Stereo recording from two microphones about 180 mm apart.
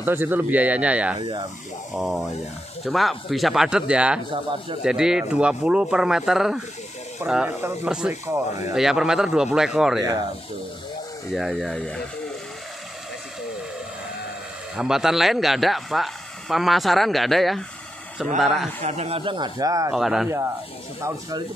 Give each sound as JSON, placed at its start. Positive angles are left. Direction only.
{"t": 0.0, "sound": "speech", "side_deg": -10}
{"t": 1.2, "sound": "speech", "side_deg": -25}
{"t": 2.0, "sound": "speech", "side_deg": 0}
{"t": 4.3, "sound": "speech", "side_deg": -30}
{"t": 4.8, "sound": "speech", "side_deg": -5}
{"t": 11.3, "sound": "speech", "side_deg": 0}
{"t": 14.8, "sound": "speech", "side_deg": 0}
{"t": 18.8, "sound": "speech", "side_deg": -40}
{"t": 19.9, "sound": "speech", "side_deg": 0}